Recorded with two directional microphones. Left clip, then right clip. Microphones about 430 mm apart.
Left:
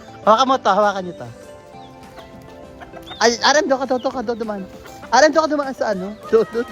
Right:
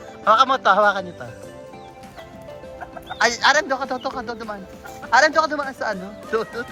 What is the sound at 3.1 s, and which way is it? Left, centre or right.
Speech, centre.